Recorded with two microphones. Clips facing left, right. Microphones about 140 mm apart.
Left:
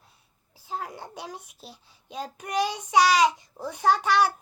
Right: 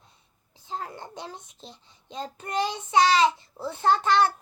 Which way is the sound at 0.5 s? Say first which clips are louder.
Left 1 dB; 10° left (ahead or behind).